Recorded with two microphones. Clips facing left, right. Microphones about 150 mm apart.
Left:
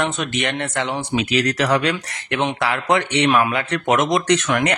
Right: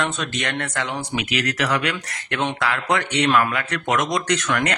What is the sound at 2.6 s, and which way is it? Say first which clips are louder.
Speech: left 4 dB; 20° left (ahead or behind).